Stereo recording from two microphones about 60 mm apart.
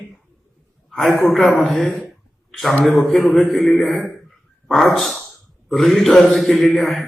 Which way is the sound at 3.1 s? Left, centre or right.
Centre.